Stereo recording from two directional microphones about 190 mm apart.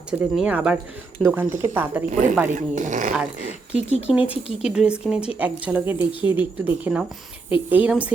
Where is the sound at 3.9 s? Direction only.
35° left (ahead or behind).